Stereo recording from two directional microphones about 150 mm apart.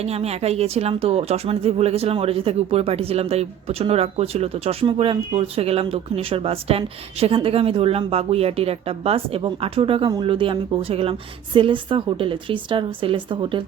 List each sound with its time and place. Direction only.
0.0 s speech: 45° right (ahead or behind)